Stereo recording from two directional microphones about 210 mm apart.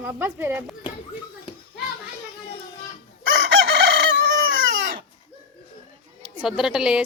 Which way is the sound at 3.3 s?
55° right (ahead or behind).